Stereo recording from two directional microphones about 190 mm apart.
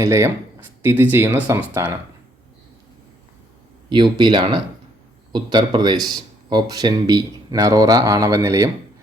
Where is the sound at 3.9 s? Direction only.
25° right (ahead or behind).